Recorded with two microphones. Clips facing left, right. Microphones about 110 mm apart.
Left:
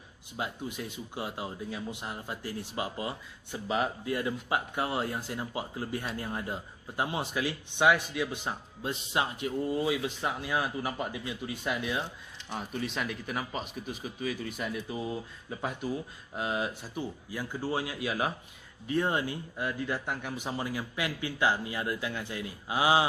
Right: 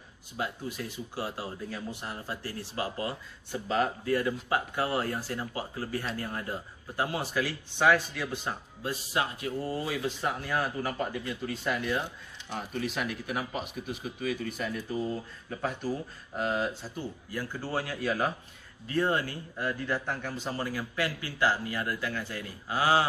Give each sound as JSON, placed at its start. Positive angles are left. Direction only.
{"t": 0.4, "sound": "speech", "side_deg": 20}
{"t": 12.8, "sound": "speech", "side_deg": -5}
{"t": 16.3, "sound": "a man's voice", "side_deg": 10}